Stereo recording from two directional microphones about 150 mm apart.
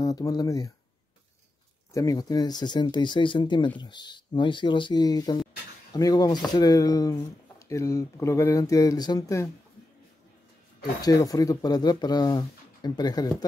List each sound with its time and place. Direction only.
0.0 s speech: 25° left (ahead or behind)
2.0 s speech: 25° left (ahead or behind)
11.0 s speech: 25° left (ahead or behind)